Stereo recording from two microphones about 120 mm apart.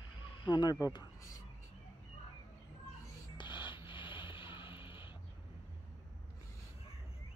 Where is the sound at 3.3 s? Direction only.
40° left (ahead or behind).